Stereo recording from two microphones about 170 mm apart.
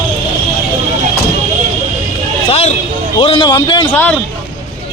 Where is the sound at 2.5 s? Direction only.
40° left (ahead or behind).